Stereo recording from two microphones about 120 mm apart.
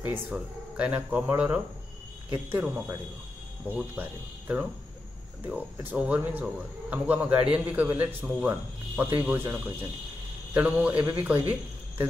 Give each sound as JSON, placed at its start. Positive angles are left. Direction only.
{"t": 0.0, "sound": "a man's voice", "side_deg": -10}